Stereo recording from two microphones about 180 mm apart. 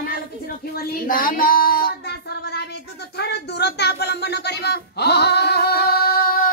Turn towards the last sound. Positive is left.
turn(degrees=55)  # may be behind; listen again after turning